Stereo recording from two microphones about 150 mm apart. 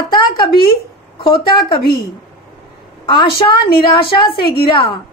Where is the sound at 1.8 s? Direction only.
90° left.